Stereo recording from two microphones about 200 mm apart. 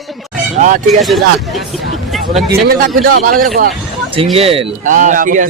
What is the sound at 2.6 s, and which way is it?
Music, 50° right (ahead or behind).